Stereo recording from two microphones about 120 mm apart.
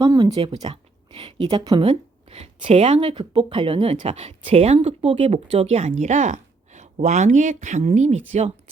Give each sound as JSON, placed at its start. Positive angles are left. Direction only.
{"t": 0.0, "sound": "speech", "side_deg": -30}
{"t": 0.3, "sound": "a woman's voice", "side_deg": -50}
{"t": 3.2, "sound": "speech", "side_deg": -45}
{"t": 7.9, "sound": "speech", "side_deg": -70}